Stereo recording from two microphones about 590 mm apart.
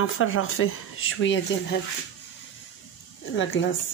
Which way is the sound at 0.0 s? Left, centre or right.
Centre.